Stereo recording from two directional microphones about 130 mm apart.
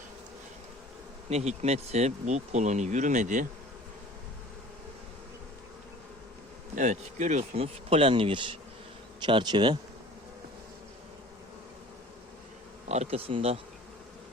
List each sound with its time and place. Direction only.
1.3 s speech: 55° right (ahead or behind); by 3.4 s 75° right (ahead or behind)
6.7 s speech: 65° right (ahead or behind); by 9.7 s 35° right (ahead or behind)
12.9 s speech: 55° right (ahead or behind)